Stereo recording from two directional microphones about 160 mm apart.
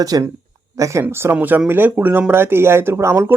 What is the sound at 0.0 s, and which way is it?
Speech, 20° right (ahead or behind).